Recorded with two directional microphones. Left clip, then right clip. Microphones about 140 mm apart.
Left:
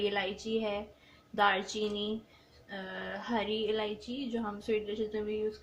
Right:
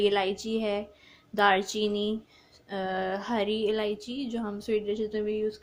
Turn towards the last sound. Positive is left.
turn(degrees=-90)